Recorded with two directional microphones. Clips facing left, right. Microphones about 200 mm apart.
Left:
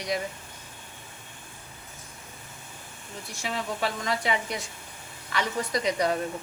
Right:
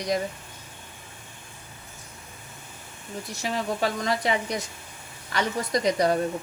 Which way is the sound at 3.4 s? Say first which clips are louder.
Right 3 dB; 40° right (ahead or behind).